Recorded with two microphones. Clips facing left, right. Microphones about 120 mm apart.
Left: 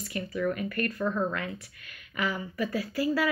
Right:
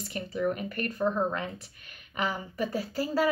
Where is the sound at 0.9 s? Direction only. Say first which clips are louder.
Right 5 dB; 20° right (ahead or behind).